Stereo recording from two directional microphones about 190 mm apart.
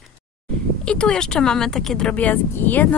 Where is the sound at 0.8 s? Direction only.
5° left (ahead or behind).